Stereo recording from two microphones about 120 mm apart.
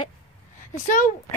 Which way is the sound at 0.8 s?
90° left.